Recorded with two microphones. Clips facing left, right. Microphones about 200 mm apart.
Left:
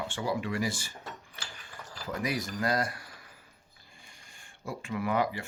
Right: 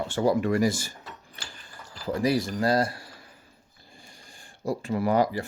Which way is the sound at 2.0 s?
30° right (ahead or behind).